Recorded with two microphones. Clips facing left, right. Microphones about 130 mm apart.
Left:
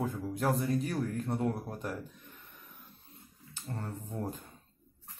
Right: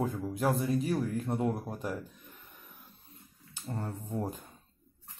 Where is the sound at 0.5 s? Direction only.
5° right (ahead or behind).